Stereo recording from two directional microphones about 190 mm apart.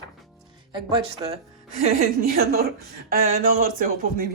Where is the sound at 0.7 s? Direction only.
25° right (ahead or behind).